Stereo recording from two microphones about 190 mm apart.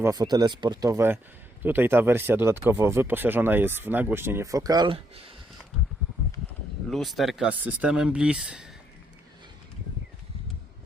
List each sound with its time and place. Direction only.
0.0 s speech: 20° right (ahead or behind)
6.9 s speech: centre (ahead or behind)